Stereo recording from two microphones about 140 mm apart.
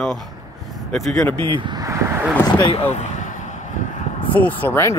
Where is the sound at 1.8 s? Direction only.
20° right (ahead or behind).